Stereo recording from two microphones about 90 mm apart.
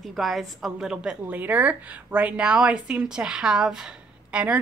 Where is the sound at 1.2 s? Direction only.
20° right (ahead or behind).